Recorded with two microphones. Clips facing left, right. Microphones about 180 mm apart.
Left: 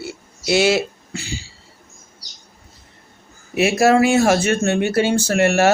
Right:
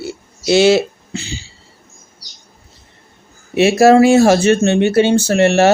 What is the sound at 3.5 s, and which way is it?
Speech, 25° right (ahead or behind).